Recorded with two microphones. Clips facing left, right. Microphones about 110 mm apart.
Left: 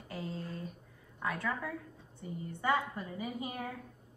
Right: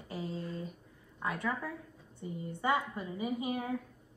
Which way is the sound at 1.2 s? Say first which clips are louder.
Right 1 dB; 25° right (ahead or behind).